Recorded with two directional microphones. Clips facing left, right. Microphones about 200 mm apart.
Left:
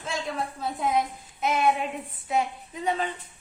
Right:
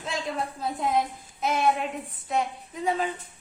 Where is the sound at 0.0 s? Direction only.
Centre (ahead or behind).